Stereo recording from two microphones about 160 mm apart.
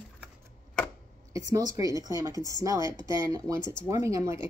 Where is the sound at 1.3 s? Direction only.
20° right (ahead or behind).